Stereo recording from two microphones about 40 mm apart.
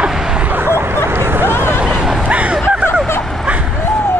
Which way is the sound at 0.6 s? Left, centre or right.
Right.